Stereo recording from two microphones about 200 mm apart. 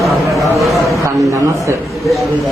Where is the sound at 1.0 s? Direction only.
15° right (ahead or behind).